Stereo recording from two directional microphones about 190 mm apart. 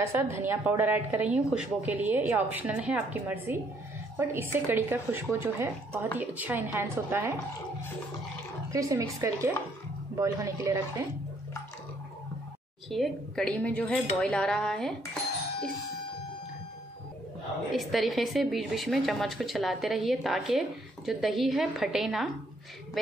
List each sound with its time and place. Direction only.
0.0 s a woman's voice: 10° right (ahead or behind)
8.7 s a woman's voice: 15° right (ahead or behind)
12.9 s a woman's voice: 5° left (ahead or behind)
17.6 s a woman's voice: centre (ahead or behind)